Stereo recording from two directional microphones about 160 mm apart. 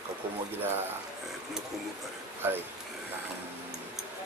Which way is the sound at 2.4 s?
15° right (ahead or behind).